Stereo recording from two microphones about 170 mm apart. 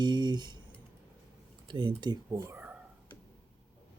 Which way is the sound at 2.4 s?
10° right (ahead or behind).